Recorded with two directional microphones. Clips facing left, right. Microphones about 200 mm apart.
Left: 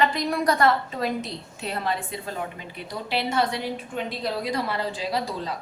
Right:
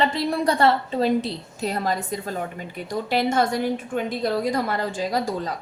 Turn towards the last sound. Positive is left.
turn(degrees=-45)  # may be behind; listen again after turning